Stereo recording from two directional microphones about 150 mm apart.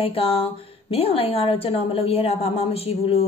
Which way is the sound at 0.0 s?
40° left (ahead or behind).